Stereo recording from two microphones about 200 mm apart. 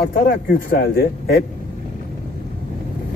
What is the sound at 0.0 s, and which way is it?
A man's voice, 50° left (ahead or behind).